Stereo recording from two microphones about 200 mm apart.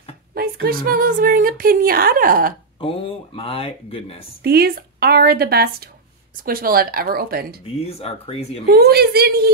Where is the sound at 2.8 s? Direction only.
25° left (ahead or behind).